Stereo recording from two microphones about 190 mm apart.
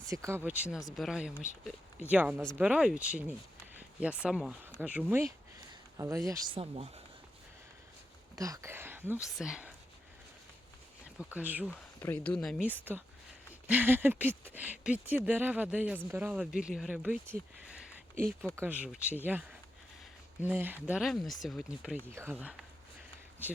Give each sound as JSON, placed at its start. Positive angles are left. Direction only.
{"t": 0.1, "sound": "speech", "side_deg": -15}
{"t": 6.6, "sound": "speech", "side_deg": -30}
{"t": 8.4, "sound": "speech", "side_deg": -15}
{"t": 11.0, "sound": "speech", "side_deg": -5}
{"t": 11.9, "sound": "speech", "side_deg": 10}
{"t": 12.6, "sound": "speech", "side_deg": -10}
{"t": 18.1, "sound": "speech", "side_deg": -50}
{"t": 18.5, "sound": "speech", "side_deg": -10}